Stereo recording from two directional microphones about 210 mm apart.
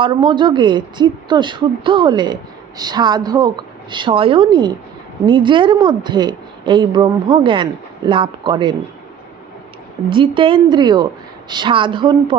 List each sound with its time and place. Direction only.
0.0 s a woman's voice: 20° right (ahead or behind)
10.1 s a woman's voice: 25° right (ahead or behind)